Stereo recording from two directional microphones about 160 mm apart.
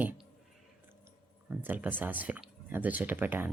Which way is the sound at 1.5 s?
10° right (ahead or behind).